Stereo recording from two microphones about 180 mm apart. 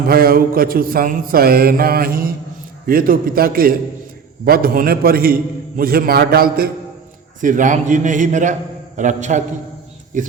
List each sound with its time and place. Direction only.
0.1 s mantra: 55° right (ahead or behind)
2.8 s a man's voice: 55° right (ahead or behind)
4.4 s mantra: 55° right (ahead or behind)
7.4 s a man's voice: 45° right (ahead or behind)